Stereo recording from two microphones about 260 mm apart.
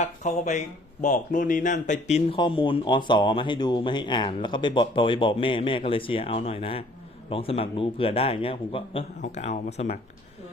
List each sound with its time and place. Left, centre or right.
0.0 s speech: left